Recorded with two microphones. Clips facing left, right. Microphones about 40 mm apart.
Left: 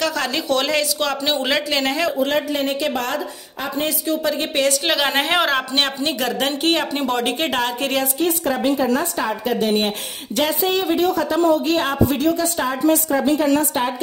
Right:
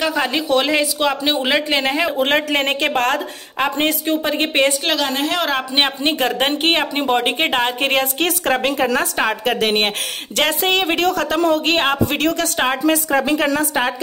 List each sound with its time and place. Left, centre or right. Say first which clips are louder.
0.0 s speech: right 3 dB; centre
2.1 s a woman's voice: right 3 dB; right
4.1 s speech: right 2 dB; right
5.1 s a woman's voice: left 1 dB; left
5.4 s a man's voice: left 1 dB; centre
6.0 s speech: right 3 dB; right
8.2 s a woman's voice: right 2 dB; right
11.7 s a woman's voice: right 1 dB; right
12.2 s a woman's voice: right 1 dB; right